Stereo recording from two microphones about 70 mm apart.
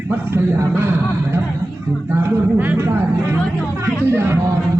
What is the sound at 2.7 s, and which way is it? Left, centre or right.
Speech, right.